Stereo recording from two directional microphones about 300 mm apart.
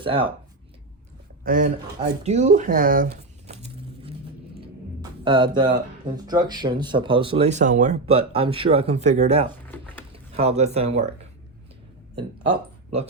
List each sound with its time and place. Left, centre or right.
0.0 s speech: centre
1.5 s speech: right
2.0 s a sound: right
5.2 s speech: centre
9.5 s a sound: centre
10.3 s speech: right